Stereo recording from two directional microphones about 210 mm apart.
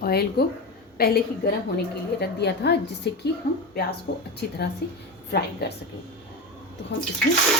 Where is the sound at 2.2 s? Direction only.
50° left (ahead or behind).